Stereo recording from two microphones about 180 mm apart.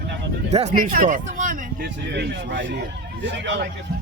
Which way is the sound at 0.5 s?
45° right (ahead or behind).